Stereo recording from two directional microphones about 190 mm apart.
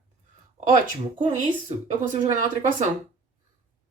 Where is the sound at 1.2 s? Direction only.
35° right (ahead or behind).